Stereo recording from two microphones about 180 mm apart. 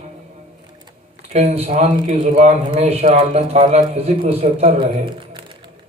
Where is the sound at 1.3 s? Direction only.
35° right (ahead or behind).